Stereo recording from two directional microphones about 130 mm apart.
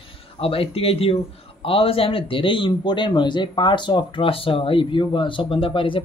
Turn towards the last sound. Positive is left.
turn(degrees=40)  # may be behind; listen again after turning